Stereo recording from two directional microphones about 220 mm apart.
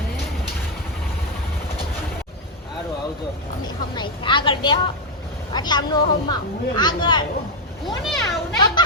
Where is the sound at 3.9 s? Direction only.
20° left (ahead or behind).